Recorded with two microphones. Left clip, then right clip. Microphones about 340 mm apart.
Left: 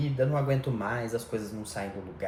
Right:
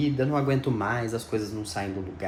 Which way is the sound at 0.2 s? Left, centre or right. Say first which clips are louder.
Right 2 dB; right.